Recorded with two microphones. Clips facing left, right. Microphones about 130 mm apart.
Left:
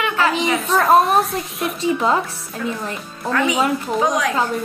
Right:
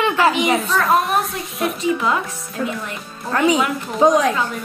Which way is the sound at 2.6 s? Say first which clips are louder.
Right 1 dB; 35° right (ahead or behind).